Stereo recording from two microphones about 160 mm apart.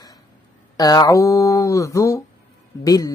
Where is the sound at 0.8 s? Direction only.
25° left (ahead or behind).